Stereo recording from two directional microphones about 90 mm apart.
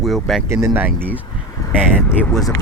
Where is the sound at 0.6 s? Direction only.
20° right (ahead or behind).